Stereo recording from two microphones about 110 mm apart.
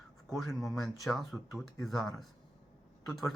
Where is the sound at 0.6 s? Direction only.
Centre (ahead or behind).